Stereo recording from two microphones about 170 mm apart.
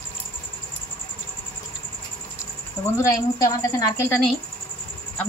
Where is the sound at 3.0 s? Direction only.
20° left (ahead or behind).